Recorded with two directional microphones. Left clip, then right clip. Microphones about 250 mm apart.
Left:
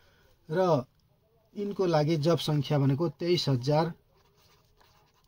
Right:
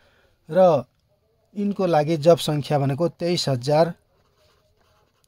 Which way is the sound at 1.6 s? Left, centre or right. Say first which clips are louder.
Right 7 dB; right.